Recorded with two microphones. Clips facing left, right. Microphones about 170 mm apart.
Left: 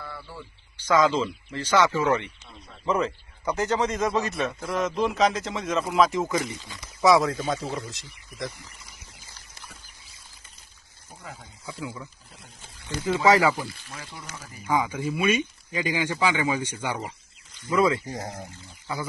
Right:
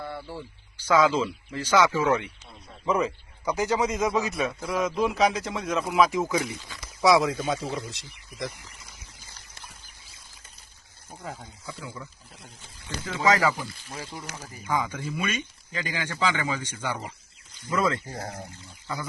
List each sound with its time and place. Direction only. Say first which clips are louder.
0.0 s a sound: right 4 dB; 25° right (ahead or behind)
0.8 s a man's voice: even; 10° right (ahead or behind)
11.6 s speech: left 5 dB; 10° left (ahead or behind)
13.1 s speech: left 3 dB; 10° left (ahead or behind)
14.7 s speech: left 3 dB; 10° left (ahead or behind)
17.7 s a man's voice: left 4 dB; centre (ahead or behind)
18.0 s speech: left 2 dB; 15° left (ahead or behind)